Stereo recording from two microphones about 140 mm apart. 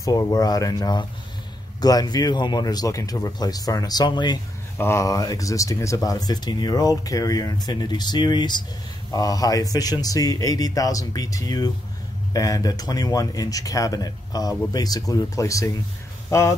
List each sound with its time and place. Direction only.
0.0 s speech: 25° left (ahead or behind)
4.7 s speech: 20° left (ahead or behind)